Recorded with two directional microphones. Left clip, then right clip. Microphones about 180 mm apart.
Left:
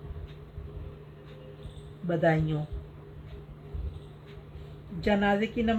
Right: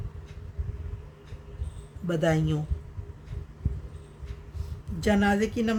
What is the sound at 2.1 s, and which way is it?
Speech, 40° right (ahead or behind).